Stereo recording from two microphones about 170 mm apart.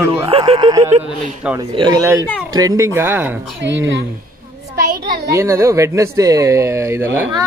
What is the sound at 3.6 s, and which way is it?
Speech, 90° right.